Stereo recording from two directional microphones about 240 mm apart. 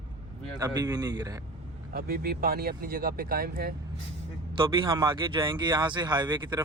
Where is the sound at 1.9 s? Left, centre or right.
Right.